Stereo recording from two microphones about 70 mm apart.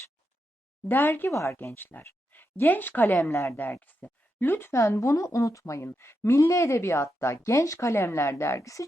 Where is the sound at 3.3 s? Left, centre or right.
Left.